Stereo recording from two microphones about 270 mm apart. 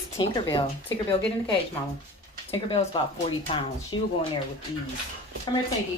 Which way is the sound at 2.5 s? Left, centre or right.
Centre.